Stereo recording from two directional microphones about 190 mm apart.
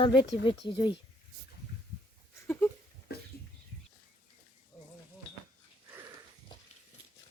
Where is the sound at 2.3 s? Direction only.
10° left (ahead or behind).